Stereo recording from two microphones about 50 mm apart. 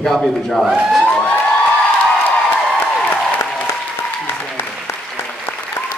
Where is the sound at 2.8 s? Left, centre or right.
Left.